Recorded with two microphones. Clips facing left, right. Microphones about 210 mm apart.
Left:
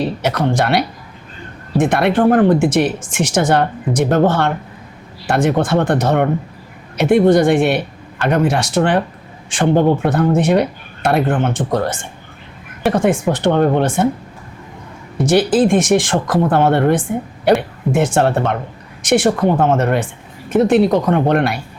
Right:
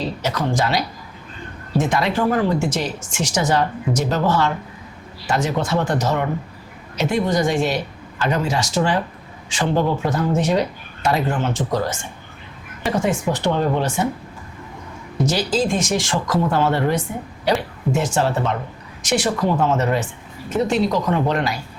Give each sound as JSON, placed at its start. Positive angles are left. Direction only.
{"t": 0.0, "sound": "speech", "side_deg": 60}
{"t": 15.3, "sound": "speech", "side_deg": 55}